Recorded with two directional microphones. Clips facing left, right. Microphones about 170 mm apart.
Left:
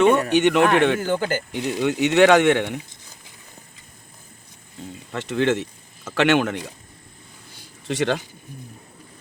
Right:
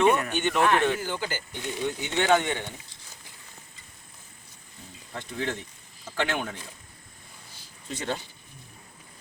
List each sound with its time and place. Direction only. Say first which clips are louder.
0.3 s speech: left 7 dB; 85° left; by 1.0 s 70° left (ahead or behind)
1.0 s speech: left 9 dB; 50° left (ahead or behind)
1.5 s speech: left 8 dB; 90° left
5.1 s speech: left 11 dB; 80° left
7.9 s speech: left 9 dB; 90° left